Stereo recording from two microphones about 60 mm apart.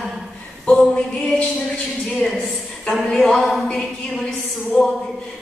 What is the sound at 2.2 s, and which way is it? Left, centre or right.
A woman's voice, centre.